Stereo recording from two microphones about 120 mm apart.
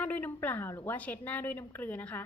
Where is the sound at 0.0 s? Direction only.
15° left (ahead or behind).